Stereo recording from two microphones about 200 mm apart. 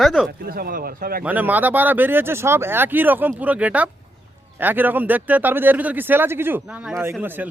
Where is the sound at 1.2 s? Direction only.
10° right (ahead or behind).